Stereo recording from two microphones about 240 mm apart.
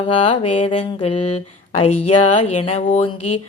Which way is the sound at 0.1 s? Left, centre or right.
Left.